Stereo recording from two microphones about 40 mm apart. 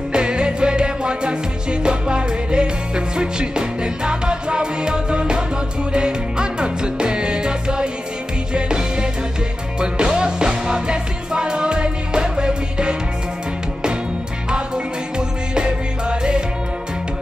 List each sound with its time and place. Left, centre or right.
0.1 s music: right
15.1 s music: right